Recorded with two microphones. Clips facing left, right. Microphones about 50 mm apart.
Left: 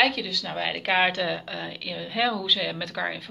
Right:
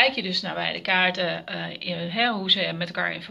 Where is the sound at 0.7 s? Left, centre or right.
Centre.